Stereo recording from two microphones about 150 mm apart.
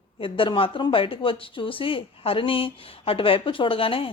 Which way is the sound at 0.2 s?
35° left (ahead or behind).